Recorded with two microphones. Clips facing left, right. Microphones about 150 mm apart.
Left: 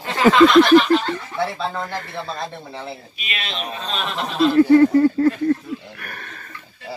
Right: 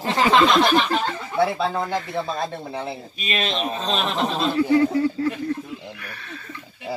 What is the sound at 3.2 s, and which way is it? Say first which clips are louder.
Speech: right 6 dB; 40° right (ahead or behind).